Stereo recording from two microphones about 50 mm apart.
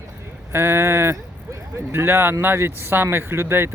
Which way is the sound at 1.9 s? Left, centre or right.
Right.